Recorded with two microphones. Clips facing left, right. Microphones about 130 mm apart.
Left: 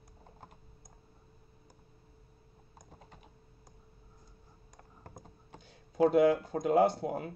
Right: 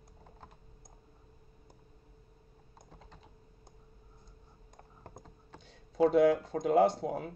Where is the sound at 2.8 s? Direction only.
15° left (ahead or behind).